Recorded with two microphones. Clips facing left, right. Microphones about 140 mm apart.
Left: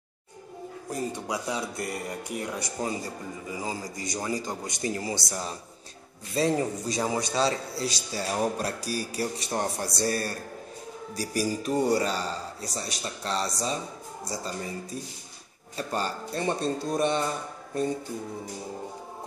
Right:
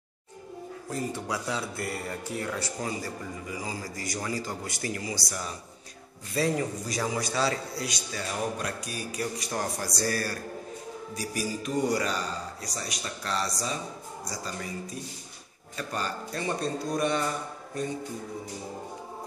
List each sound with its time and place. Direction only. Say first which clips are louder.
0.8 s a man's voice: left 1 dB; 15° left (ahead or behind)
11.1 s a man's voice: left 4 dB; 35° left (ahead or behind)